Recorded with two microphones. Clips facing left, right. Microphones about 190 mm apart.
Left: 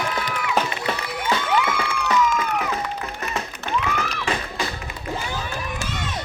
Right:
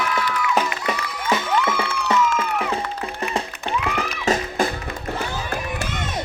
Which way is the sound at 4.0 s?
40° right (ahead or behind).